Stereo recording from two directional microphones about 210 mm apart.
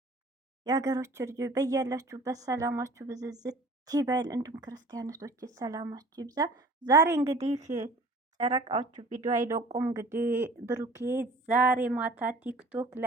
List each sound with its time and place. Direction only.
0.6 s a woman's voice: 15° right (ahead or behind)
7.3 s speech: 30° right (ahead or behind)
8.4 s speech: 20° right (ahead or behind)
8.9 s speech: 35° right (ahead or behind)
9.4 s a woman's voice: 15° right (ahead or behind)